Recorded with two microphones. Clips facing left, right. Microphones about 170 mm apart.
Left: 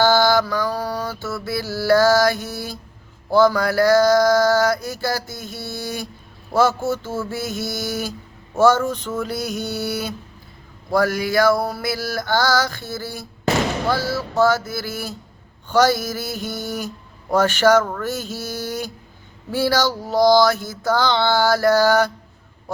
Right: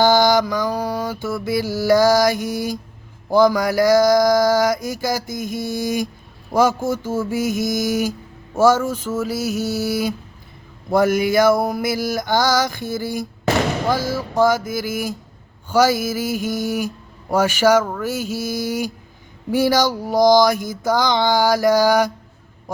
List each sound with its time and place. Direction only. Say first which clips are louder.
0.0 s mantra: right 1 dB; 15° right (ahead or behind)
10.9 s mantra: right 3 dB; 20° right (ahead or behind)